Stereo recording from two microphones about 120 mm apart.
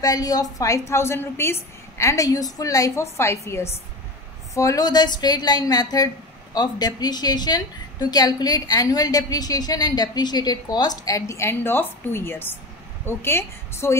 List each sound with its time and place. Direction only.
0.0 s a woman's voice: 30° left (ahead or behind)